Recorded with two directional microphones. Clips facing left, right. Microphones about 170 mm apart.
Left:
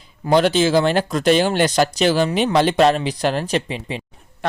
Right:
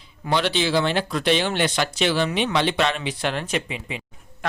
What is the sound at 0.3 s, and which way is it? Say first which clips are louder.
Speech: left 7 dB; 40° left (ahead or behind).